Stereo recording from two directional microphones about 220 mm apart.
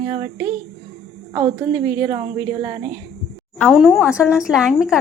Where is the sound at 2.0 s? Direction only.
20° right (ahead or behind).